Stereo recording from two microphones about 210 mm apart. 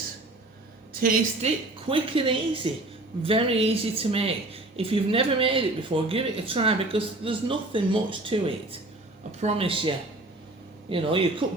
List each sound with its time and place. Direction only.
1.0 s speech: 35° right (ahead or behind)